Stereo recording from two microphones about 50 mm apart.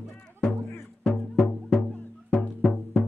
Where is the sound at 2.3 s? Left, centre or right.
Left.